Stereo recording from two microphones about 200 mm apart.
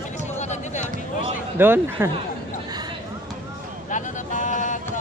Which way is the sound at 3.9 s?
40° left (ahead or behind).